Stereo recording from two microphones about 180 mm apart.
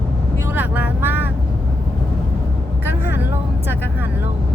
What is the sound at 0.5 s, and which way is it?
Speech, 10° right (ahead or behind).